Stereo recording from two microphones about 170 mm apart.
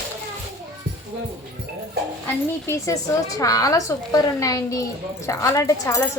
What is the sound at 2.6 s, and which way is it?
A woman's voice, 20° left (ahead or behind).